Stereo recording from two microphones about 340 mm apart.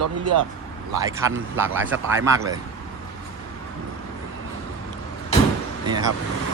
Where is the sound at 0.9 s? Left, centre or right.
Centre.